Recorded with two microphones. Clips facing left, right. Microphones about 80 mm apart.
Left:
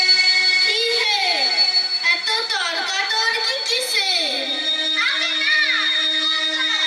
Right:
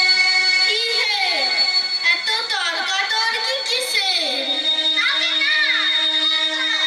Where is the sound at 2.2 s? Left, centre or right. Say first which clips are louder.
Even; centre.